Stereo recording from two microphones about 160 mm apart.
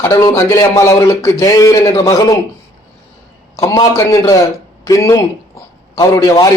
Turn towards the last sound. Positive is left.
turn(degrees=20)  # may be behind; listen again after turning